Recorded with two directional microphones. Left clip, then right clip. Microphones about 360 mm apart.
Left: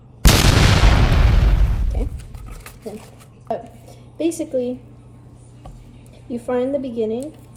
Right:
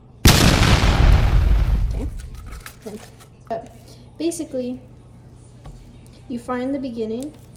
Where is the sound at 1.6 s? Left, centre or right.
Centre.